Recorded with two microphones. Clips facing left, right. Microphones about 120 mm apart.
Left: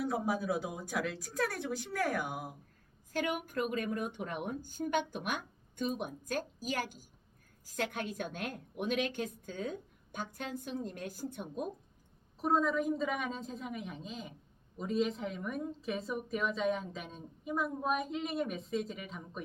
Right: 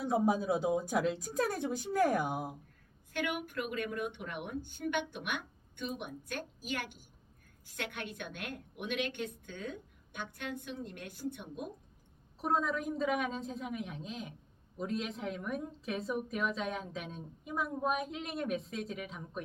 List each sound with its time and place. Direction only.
0.0 s a woman's voice: 25° right (ahead or behind)
3.1 s a woman's voice: 40° left (ahead or behind)
12.4 s a woman's voice: centre (ahead or behind)